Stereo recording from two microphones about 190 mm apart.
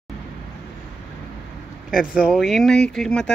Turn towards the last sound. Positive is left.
turn(degrees=5)  # may be behind; listen again after turning